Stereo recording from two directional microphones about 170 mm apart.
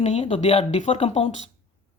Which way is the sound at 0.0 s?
40° left (ahead or behind).